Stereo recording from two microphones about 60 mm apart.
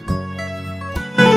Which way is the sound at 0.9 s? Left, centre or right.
Centre.